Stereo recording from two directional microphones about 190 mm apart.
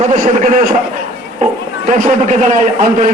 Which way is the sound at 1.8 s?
45° right (ahead or behind).